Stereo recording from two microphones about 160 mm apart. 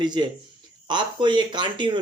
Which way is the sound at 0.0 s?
30° right (ahead or behind).